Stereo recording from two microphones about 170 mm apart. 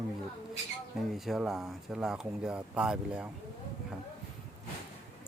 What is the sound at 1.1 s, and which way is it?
Speech, centre (ahead or behind).